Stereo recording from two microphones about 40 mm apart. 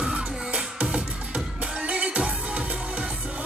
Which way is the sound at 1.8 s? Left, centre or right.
Right.